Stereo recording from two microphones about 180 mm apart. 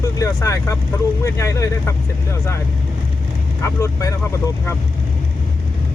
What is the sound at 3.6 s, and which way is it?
Speech, 15° left (ahead or behind).